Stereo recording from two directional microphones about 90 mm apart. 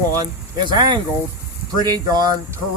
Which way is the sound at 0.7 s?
55° right (ahead or behind).